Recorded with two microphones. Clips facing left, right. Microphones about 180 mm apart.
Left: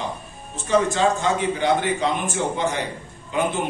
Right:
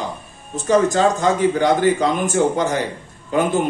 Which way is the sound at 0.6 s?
40° right (ahead or behind).